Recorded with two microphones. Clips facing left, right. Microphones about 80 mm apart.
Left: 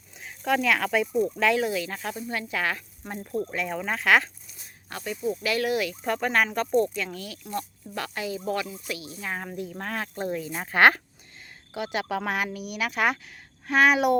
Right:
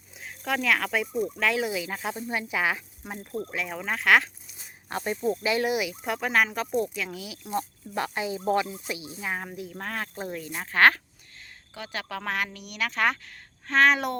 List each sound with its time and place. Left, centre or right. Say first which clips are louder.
0.2 s speech: left 4 dB; centre
4.5 s snake: right 6 dB; right
5.4 s speech: even; right; by 7.3 s centre
7.4 s speech: right 4 dB; right
9.2 s speech: even; centre
10.5 s speech: left 1 dB; centre